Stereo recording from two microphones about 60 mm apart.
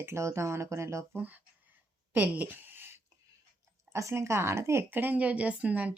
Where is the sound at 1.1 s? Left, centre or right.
Right.